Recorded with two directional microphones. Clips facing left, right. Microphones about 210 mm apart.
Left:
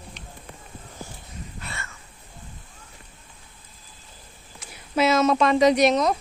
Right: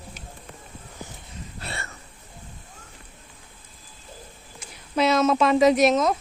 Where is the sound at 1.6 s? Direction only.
35° right (ahead or behind).